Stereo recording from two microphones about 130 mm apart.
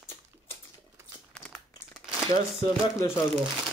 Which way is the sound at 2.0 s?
5° right (ahead or behind).